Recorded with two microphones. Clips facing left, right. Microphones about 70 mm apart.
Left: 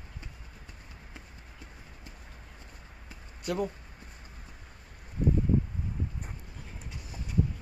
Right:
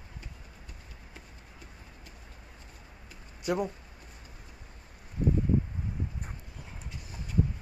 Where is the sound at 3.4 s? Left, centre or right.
Centre.